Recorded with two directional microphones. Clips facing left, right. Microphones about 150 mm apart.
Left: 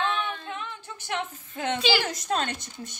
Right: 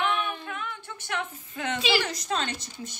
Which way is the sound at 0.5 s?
30° left (ahead or behind).